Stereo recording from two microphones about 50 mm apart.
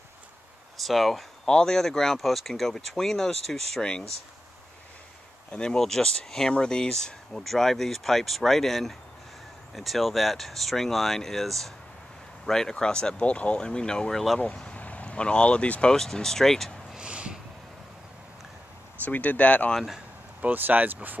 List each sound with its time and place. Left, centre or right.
0.7 s speech: centre
5.5 s speech: centre
14.1 s speech: centre
14.4 s speech: left
15.9 s speech: centre
16.9 s a sound: centre
19.0 s speech: left
20.4 s speech: right